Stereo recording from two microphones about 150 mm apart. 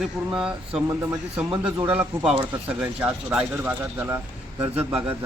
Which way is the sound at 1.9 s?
10° right (ahead or behind).